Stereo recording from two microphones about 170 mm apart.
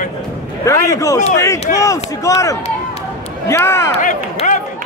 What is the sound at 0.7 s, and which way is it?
A man's voice, 20° left (ahead or behind).